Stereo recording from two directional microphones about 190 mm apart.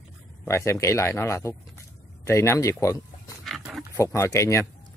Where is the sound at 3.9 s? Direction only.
15° left (ahead or behind).